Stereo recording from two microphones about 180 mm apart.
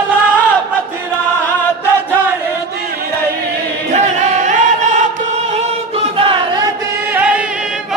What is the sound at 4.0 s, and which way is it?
Music, 40° right (ahead or behind).